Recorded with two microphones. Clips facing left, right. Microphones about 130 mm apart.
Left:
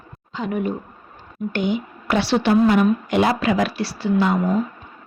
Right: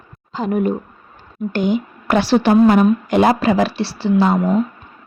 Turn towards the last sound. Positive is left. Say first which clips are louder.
# right 4 dB
turn(degrees=-30)  # may be behind; listen again after turning